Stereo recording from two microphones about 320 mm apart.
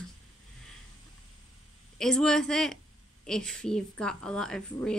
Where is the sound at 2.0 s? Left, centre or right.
Centre.